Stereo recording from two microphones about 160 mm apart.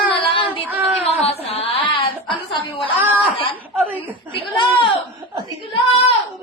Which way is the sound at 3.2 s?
35° left (ahead or behind).